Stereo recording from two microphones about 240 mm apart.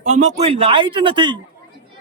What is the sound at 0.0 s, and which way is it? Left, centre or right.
A man's voice, right.